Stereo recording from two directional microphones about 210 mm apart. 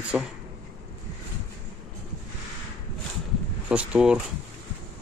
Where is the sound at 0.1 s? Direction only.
5° right (ahead or behind).